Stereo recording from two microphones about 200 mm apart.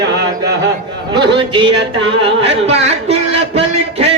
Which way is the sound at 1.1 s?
25° right (ahead or behind).